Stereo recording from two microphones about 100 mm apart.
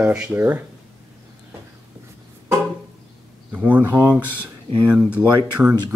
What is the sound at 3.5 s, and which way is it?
Speech, 15° right (ahead or behind).